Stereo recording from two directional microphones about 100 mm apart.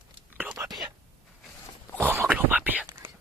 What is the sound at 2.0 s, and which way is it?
Whispering, 25° right (ahead or behind).